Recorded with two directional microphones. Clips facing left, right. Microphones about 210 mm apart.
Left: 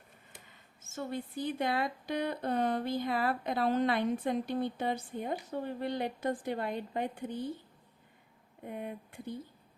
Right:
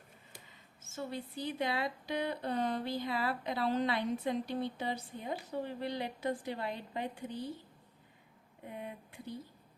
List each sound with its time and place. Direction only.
0.9 s a woman's voice: 50° left (ahead or behind)
8.6 s a woman's voice: 50° left (ahead or behind)